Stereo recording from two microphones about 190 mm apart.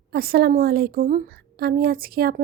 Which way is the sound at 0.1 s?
55° right (ahead or behind).